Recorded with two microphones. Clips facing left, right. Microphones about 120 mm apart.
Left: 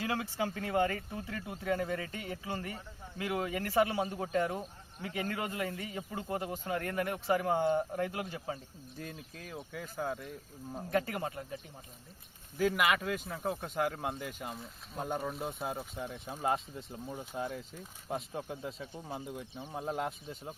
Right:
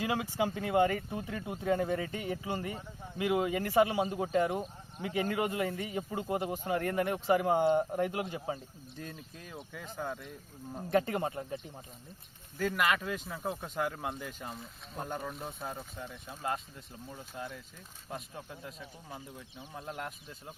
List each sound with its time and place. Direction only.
0.0 s speech: 15° right (ahead or behind)
9.0 s speech: 5° left (ahead or behind)
10.9 s speech: 25° right (ahead or behind)
12.5 s speech: 5° left (ahead or behind)
16.1 s speech: 20° left (ahead or behind)